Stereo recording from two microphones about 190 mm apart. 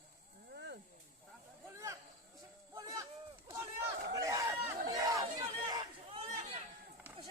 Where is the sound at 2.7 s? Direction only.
15° right (ahead or behind).